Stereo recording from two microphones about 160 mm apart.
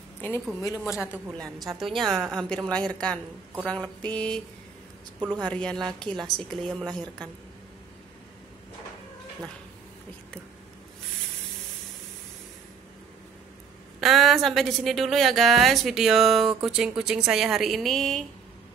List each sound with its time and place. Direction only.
0.6 s a woman's voice: 20° left (ahead or behind)
0.9 s a woman's voice: 5° right (ahead or behind)
3.6 s mantra: 5° left (ahead or behind)
5.4 s mantra: 5° left (ahead or behind)
5.9 s a woman's voice: 5° left (ahead or behind)
14.0 s a woman's voice: centre (ahead or behind)